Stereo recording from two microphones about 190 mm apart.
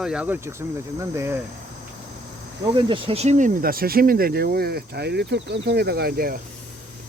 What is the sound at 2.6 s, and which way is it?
Speech, 25° right (ahead or behind).